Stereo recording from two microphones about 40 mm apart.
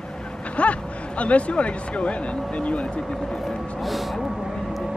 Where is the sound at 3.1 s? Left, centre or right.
Centre.